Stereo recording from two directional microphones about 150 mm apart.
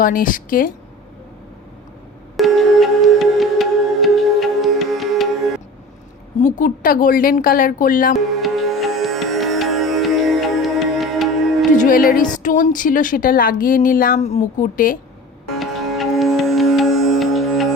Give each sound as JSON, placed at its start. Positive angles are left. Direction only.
{"t": 0.0, "sound": "a woman's voice", "side_deg": 65}
{"t": 2.3, "sound": "music", "side_deg": 0}
{"t": 6.4, "sound": "a woman's voice", "side_deg": 60}
{"t": 8.4, "sound": "music", "side_deg": 0}
{"t": 11.8, "sound": "a woman's voice", "side_deg": 70}
{"t": 14.2, "sound": "a woman's voice", "side_deg": 50}
{"t": 15.4, "sound": "music", "side_deg": 0}